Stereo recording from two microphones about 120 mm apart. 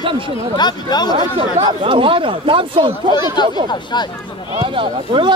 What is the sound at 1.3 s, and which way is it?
Speech, 50° right (ahead or behind).